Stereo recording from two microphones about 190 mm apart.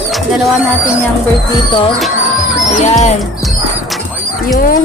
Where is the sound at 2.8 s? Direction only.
35° left (ahead or behind).